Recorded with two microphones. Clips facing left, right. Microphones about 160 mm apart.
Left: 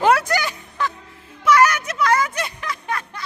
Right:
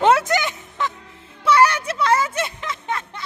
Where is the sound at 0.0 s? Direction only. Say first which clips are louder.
Right 1 dB; 25° right (ahead or behind).